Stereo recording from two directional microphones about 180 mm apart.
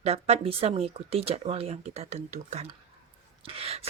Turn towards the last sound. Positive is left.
turn(degrees=-35)  # may be behind; listen again after turning